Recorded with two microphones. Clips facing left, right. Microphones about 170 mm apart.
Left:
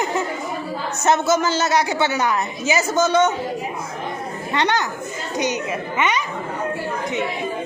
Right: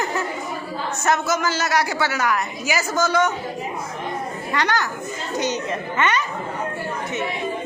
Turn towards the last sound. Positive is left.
turn(degrees=10)  # may be behind; listen again after turning